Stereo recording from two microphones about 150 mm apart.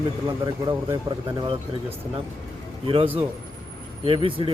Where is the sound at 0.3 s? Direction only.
30° right (ahead or behind).